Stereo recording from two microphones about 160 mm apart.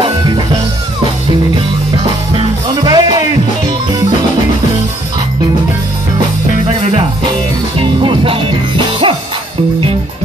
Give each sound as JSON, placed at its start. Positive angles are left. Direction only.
{"t": 2.3, "sound": "music", "side_deg": -30}
{"t": 7.8, "sound": "music", "side_deg": -30}